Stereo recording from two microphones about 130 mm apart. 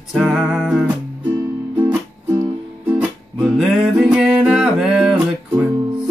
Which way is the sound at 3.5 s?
5° right (ahead or behind).